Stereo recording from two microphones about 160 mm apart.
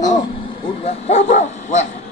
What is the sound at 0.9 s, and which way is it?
Speech, 45° left (ahead or behind).